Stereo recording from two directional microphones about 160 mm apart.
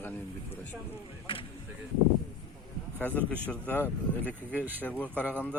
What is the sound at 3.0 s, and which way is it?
Speech, 10° left (ahead or behind).